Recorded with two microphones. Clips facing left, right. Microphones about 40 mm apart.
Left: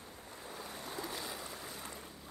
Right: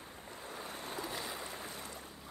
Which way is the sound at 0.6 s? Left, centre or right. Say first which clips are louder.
Right 2 dB; right.